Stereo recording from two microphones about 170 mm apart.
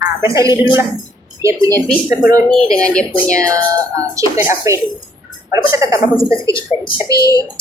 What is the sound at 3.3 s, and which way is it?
Speech, 20° right (ahead or behind).